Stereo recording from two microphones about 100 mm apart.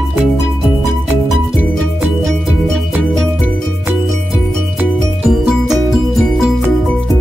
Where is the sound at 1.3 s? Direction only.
Centre (ahead or behind).